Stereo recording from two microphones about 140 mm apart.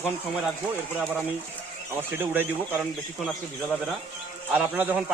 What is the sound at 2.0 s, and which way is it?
Speech, 15° right (ahead or behind).